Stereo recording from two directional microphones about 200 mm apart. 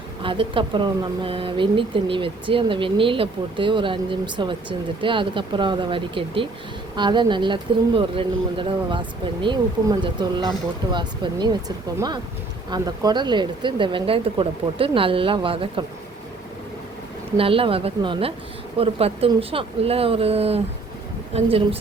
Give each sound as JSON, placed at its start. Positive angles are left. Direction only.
{"t": 0.2, "sound": "speech", "side_deg": -25}
{"t": 17.3, "sound": "speech", "side_deg": -25}